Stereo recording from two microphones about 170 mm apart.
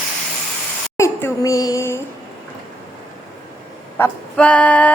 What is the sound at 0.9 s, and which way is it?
Speech, 15° left (ahead or behind).